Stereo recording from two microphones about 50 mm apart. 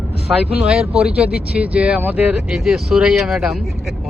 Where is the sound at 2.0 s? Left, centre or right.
Right.